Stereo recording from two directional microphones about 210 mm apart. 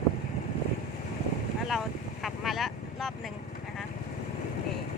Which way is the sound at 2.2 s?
Centre (ahead or behind).